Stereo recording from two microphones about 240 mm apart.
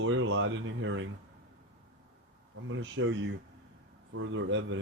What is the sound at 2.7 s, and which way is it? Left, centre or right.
Speech, right.